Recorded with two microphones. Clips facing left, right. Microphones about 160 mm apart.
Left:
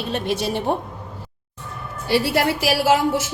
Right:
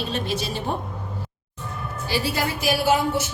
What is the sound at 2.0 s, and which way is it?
A woman's voice, 65° left (ahead or behind).